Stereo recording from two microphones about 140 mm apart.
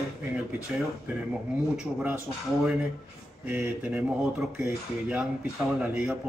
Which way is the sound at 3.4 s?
15° right (ahead or behind).